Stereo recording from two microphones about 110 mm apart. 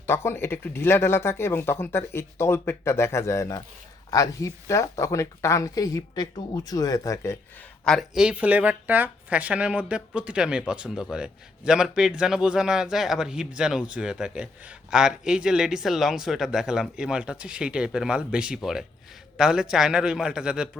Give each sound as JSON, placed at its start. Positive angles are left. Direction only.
{"t": 0.0, "sound": "speech", "side_deg": 25}
{"t": 7.9, "sound": "a man's voice", "side_deg": 5}
{"t": 8.2, "sound": "a man's voice", "side_deg": -10}